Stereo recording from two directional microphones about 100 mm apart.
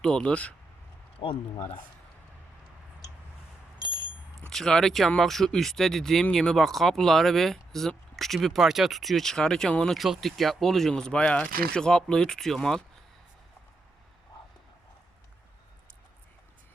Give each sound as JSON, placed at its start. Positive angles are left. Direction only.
{"t": 0.0, "sound": "speech", "side_deg": 10}
{"t": 1.2, "sound": "speech", "side_deg": 60}
{"t": 3.8, "sound": "a sound", "side_deg": -45}
{"t": 4.4, "sound": "speech", "side_deg": 5}